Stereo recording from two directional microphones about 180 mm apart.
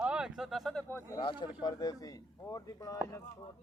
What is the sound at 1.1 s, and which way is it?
Speech, 25° left (ahead or behind).